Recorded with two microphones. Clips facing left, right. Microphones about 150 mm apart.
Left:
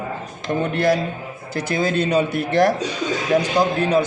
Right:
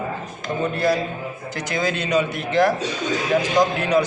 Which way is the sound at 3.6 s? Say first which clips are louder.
Right 2 dB; 10° left (ahead or behind).